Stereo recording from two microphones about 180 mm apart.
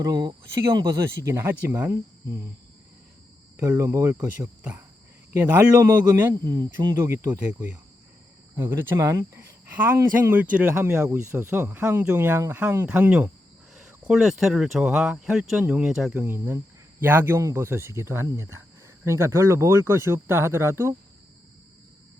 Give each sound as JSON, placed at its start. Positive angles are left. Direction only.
{"t": 0.0, "sound": "speech", "side_deg": -20}
{"t": 3.6, "sound": "speech", "side_deg": -15}